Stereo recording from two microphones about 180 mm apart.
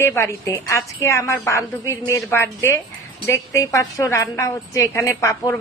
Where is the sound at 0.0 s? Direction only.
15° left (ahead or behind).